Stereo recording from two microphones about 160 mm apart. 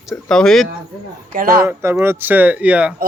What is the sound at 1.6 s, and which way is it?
Speech, 15° right (ahead or behind).